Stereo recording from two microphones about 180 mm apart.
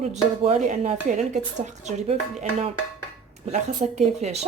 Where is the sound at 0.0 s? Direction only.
40° right (ahead or behind).